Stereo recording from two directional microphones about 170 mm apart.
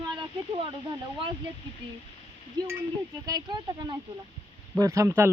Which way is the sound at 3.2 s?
25° right (ahead or behind).